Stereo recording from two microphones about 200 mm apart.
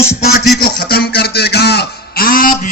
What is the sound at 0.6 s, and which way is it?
Speech, 50° left (ahead or behind).